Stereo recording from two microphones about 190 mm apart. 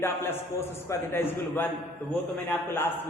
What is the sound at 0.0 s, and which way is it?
A woman's voice, 10° left (ahead or behind).